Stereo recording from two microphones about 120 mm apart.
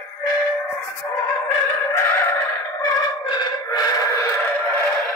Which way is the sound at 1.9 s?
20° left (ahead or behind).